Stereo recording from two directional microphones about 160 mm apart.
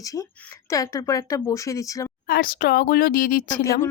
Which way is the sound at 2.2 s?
70° left (ahead or behind).